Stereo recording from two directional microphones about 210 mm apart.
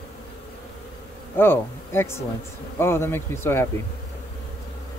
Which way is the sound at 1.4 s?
10° left (ahead or behind).